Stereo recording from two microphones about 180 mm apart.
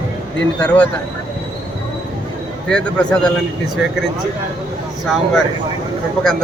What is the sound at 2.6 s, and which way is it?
Speech, 5° left (ahead or behind).